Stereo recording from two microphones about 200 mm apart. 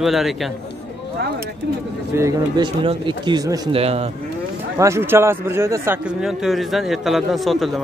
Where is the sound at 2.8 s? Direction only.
25° right (ahead or behind).